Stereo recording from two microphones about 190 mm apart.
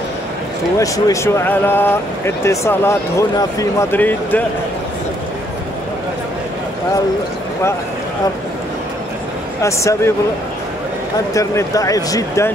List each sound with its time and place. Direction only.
0.7 s speech: 15° left (ahead or behind)
9.6 s speech: 15° left (ahead or behind)
11.3 s speech: 15° left (ahead or behind)